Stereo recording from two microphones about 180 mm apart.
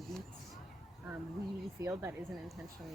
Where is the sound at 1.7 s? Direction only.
15° right (ahead or behind).